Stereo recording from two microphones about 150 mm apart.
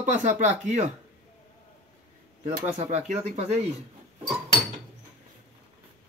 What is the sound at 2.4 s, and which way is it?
Speech, 50° right (ahead or behind).